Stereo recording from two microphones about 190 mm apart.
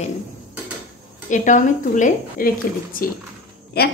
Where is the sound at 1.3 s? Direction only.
40° left (ahead or behind).